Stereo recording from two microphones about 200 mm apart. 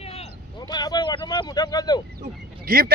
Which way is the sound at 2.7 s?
45° right (ahead or behind).